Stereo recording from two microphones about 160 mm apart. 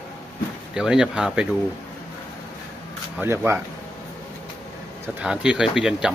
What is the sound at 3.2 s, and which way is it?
Speech, 15° right (ahead or behind).